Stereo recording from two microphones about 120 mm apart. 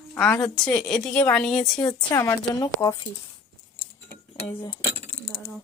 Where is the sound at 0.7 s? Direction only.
5° left (ahead or behind).